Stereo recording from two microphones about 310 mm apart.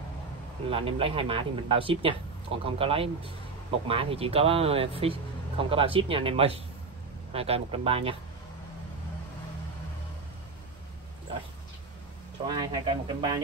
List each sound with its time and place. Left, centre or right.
0.7 s speech: centre
12.4 s speech: centre